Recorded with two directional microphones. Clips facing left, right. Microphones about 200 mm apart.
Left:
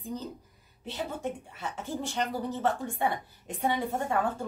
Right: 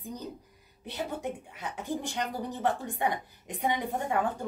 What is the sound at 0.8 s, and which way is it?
A woman's voice, 15° right (ahead or behind).